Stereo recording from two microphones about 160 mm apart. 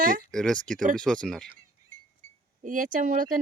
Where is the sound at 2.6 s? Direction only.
55° right (ahead or behind).